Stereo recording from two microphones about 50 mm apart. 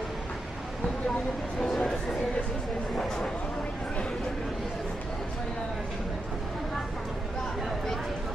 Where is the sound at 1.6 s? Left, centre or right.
Centre.